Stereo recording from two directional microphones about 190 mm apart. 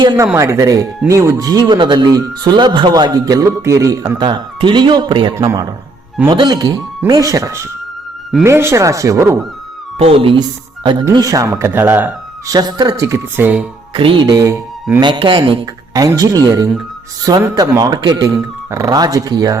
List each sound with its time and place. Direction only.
0.0 s speech: 25° right (ahead or behind)
10.0 s speech: 30° right (ahead or behind); by 13.7 s 10° right (ahead or behind)
13.9 s speech: 25° right (ahead or behind)